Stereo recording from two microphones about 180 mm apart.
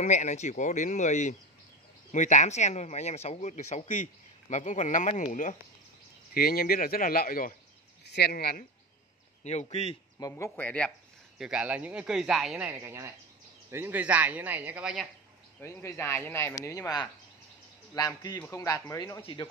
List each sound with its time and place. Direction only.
0.0 s speech: 40° left (ahead or behind)
6.3 s speech: 55° left (ahead or behind)
8.0 s speech: 65° left (ahead or behind)
9.4 s speech: 40° left (ahead or behind)
10.1 s speech: 15° left (ahead or behind)
11.3 s speech: 5° right (ahead or behind)
12.7 s speech: 15° right (ahead or behind)
15.6 s speech: 15° left (ahead or behind)